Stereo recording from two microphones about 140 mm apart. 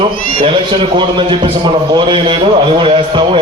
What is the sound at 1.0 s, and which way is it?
A man's voice, 35° right (ahead or behind).